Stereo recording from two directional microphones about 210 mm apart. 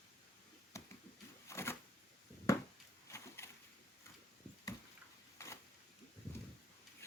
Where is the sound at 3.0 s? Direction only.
15° left (ahead or behind).